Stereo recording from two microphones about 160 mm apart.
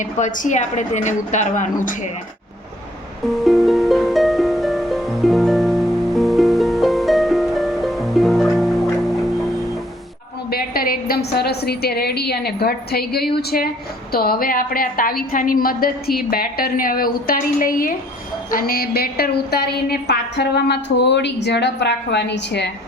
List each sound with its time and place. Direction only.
0.0 s a woman's voice: 50° left (ahead or behind)
3.4 s music: centre (ahead or behind)
10.5 s a woman's voice: 65° left (ahead or behind); by 22.7 s 90° left